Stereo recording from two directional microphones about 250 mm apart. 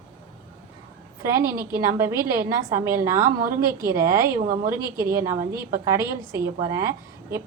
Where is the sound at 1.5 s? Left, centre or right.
Right.